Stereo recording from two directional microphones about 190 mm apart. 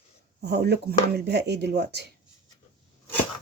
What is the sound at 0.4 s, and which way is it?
Speech, 60° right (ahead or behind).